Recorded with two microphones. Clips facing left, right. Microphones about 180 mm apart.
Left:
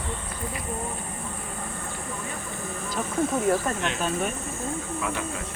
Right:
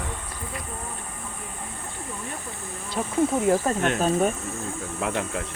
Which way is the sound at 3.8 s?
45° right (ahead or behind).